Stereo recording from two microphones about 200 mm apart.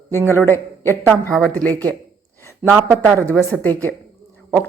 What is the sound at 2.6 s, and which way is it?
Speech, 10° right (ahead or behind).